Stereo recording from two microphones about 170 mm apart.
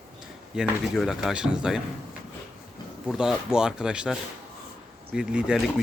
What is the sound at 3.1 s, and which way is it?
Speech, 5° right (ahead or behind).